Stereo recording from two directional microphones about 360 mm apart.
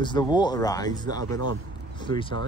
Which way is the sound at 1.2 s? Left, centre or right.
Right.